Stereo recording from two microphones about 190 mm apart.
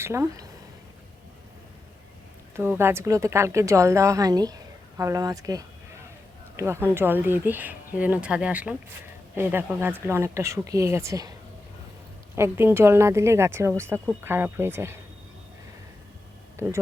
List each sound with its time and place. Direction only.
0.0 s a woman's voice: 15° right (ahead or behind)
2.6 s a woman's voice: 10° right (ahead or behind)
12.4 s a woman's voice: 10° right (ahead or behind)
16.6 s a woman's voice: 15° right (ahead or behind)